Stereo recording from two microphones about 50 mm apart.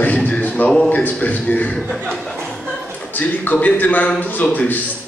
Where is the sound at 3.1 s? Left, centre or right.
Left.